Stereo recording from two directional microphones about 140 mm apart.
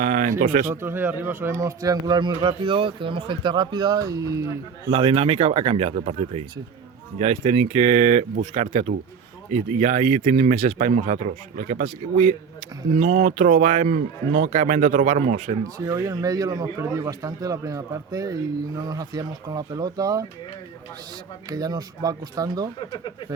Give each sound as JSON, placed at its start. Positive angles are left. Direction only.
{"t": 0.0, "sound": "a sound", "side_deg": -65}
{"t": 0.7, "sound": "speech", "side_deg": -15}
{"t": 4.9, "sound": "speech", "side_deg": -35}
{"t": 15.8, "sound": "speech", "side_deg": -25}
{"t": 21.5, "sound": "speech", "side_deg": -25}